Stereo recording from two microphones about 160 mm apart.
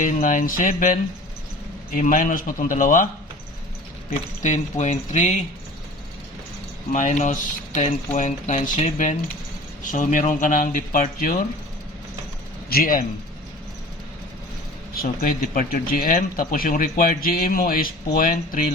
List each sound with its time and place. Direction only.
0.0 s speech: 55° left (ahead or behind)
2.0 s speech: 55° left (ahead or behind)
4.4 s speech: 50° left (ahead or behind)
6.9 s speech: 50° left (ahead or behind)
12.7 s speech: 65° left (ahead or behind)
14.9 s speech: 65° left (ahead or behind)